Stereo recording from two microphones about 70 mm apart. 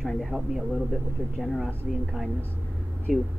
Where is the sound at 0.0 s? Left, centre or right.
Centre.